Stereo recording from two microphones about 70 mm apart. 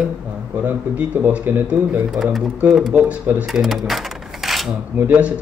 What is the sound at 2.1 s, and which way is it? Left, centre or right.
Speech, centre.